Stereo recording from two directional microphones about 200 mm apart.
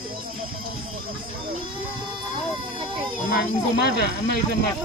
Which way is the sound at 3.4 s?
55° left (ahead or behind).